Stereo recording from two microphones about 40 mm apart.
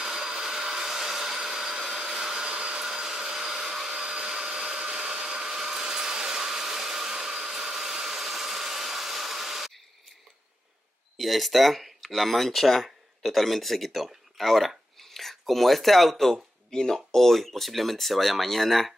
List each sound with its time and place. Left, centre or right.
0.0 s vacuum cleaner: centre
4.0 s vacuum cleaner: right
11.1 s speech: centre